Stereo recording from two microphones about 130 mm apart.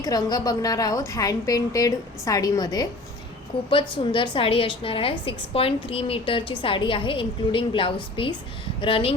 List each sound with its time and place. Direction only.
0.0 s a woman's voice: 30° left (ahead or behind)
3.7 s a woman's voice: 40° left (ahead or behind)